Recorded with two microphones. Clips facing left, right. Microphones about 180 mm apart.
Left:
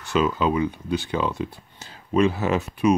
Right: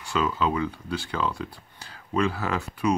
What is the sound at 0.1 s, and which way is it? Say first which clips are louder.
Speech: left 4 dB; 20° left (ahead or behind).